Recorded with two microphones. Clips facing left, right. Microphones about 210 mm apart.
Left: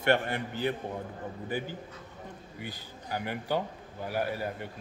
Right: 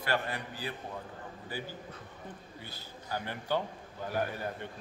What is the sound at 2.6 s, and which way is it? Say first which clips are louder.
A man's voice: left 5 dB; 15° left (ahead or behind).